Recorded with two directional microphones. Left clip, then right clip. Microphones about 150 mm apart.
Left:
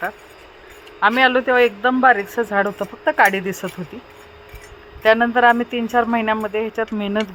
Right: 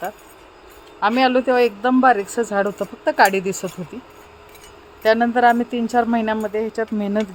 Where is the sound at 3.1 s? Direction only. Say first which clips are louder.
Right 1 dB; 25° right (ahead or behind).